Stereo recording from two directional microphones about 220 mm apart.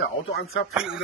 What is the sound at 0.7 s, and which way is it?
Speech, 5° right (ahead or behind).